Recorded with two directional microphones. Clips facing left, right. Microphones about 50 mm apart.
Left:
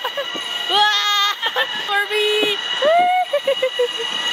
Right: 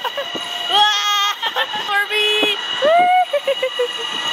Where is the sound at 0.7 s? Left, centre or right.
Right.